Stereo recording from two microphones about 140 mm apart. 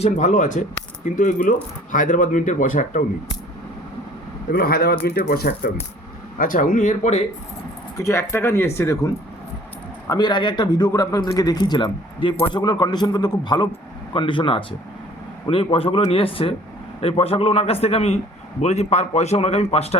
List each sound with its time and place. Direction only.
0.0 s speech: 55° left (ahead or behind)
4.5 s speech: 90° left
6.3 s speech: 80° left; by 7.3 s 55° left (ahead or behind)
7.9 s speech: 20° left (ahead or behind)
10.1 s a man's voice: 30° left (ahead or behind)